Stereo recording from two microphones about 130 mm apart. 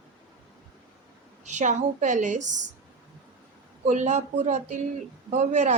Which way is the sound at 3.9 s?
65° right (ahead or behind).